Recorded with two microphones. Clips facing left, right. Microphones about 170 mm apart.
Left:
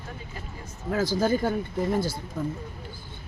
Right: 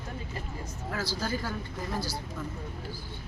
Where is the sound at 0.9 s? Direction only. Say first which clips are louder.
Left 9 dB; 50° left (ahead or behind).